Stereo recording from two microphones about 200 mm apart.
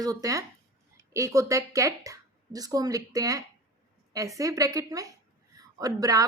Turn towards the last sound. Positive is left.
turn(degrees=-15)  # may be behind; listen again after turning